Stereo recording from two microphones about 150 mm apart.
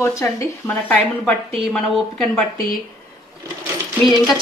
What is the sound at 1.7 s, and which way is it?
Speech, centre (ahead or behind).